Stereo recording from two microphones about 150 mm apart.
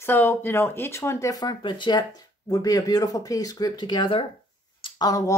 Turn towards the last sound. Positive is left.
turn(degrees=25)  # may be behind; listen again after turning